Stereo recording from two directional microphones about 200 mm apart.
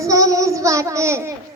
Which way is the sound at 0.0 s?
15° right (ahead or behind).